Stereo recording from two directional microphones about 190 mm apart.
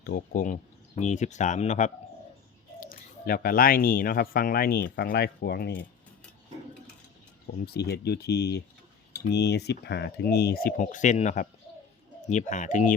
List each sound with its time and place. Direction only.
0.0 s speech: 55° left (ahead or behind); by 1.9 s 35° left (ahead or behind)
2.8 s speech: 50° left (ahead or behind)
7.6 s speech: 55° left (ahead or behind); by 12.9 s 40° left (ahead or behind)